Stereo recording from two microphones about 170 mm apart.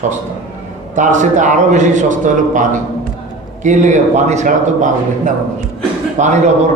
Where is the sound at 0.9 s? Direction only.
45° right (ahead or behind).